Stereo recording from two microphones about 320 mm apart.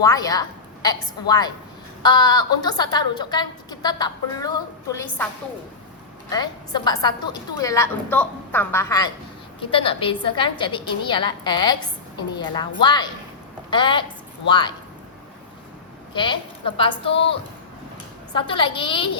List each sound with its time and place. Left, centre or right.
0.0 s a woman's voice: centre
6.3 s a woman's voice: centre
16.1 s a woman's voice: centre
18.3 s a woman's voice: centre